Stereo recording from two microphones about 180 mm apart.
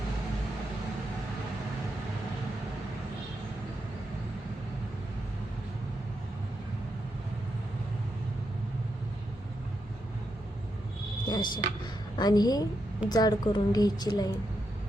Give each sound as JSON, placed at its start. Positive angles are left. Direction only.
{"t": 11.3, "sound": "vehicle", "side_deg": 25}
{"t": 12.1, "sound": "a woman's voice", "side_deg": 20}